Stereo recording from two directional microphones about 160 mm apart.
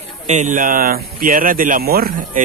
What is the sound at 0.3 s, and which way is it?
Speech, 50° right (ahead or behind).